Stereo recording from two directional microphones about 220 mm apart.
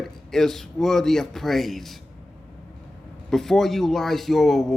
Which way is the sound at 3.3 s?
Centre (ahead or behind).